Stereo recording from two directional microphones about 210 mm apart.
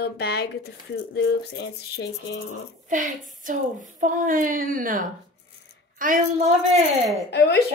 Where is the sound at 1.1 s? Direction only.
60° left (ahead or behind).